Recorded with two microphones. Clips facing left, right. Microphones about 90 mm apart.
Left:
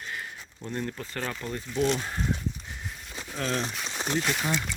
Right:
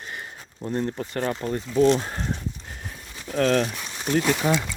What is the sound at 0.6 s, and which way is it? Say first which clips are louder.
Speech: right 7 dB; 40° right (ahead or behind).